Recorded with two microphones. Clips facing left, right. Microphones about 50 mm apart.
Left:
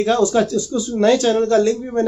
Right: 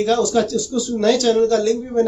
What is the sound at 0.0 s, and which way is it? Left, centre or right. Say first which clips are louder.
Speech: left 1 dB; left.